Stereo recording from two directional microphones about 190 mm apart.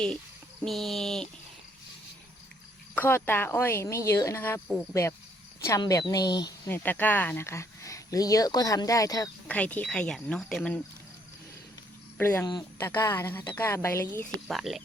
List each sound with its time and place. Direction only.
0.6 s speech: centre (ahead or behind)
2.9 s speech: 10° left (ahead or behind)
9.5 s speech: 5° left (ahead or behind)
12.1 s speech: 10° left (ahead or behind)
12.5 s speech: 20° left (ahead or behind); by 14.8 s centre (ahead or behind)